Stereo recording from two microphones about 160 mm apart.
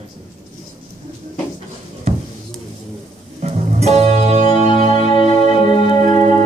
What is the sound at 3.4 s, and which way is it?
Music, 40° right (ahead or behind).